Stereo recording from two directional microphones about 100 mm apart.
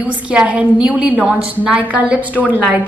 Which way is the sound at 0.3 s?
10° right (ahead or behind).